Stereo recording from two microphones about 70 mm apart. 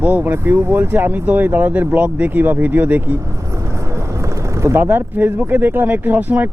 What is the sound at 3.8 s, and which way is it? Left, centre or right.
Speech, right.